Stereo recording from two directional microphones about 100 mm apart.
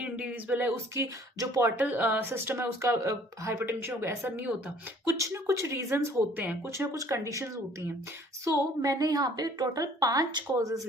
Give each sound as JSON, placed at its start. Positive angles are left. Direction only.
{"t": 0.0, "sound": "speech", "side_deg": -15}
{"t": 1.4, "sound": "a woman's voice", "side_deg": -35}
{"t": 1.8, "sound": "speech", "side_deg": -15}
{"t": 6.3, "sound": "speech", "side_deg": -15}
{"t": 6.7, "sound": "a woman's voice", "side_deg": -35}